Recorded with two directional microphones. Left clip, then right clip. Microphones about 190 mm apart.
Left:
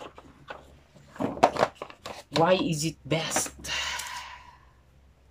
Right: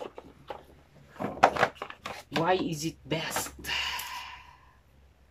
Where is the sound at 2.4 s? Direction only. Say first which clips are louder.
Left 5 dB; 5° left (ahead or behind).